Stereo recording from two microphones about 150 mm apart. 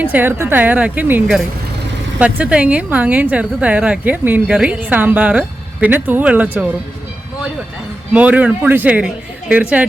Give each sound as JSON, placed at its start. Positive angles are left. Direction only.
{"t": 0.0, "sound": "a woman's voice", "side_deg": -10}
{"t": 8.1, "sound": "a woman's voice", "side_deg": -10}